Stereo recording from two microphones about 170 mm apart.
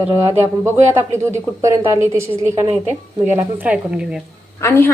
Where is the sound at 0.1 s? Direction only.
15° right (ahead or behind).